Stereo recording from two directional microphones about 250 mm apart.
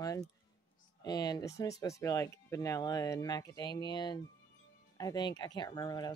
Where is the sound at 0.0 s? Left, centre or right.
Centre.